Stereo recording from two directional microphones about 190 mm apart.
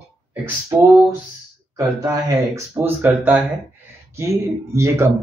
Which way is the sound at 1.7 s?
20° right (ahead or behind).